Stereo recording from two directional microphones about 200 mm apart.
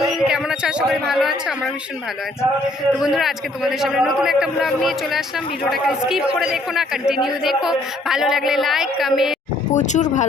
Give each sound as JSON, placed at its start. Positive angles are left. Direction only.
{"t": 0.0, "sound": "speech", "side_deg": 0}
{"t": 2.6, "sound": "a man's voice", "side_deg": 0}
{"t": 9.7, "sound": "speech", "side_deg": 35}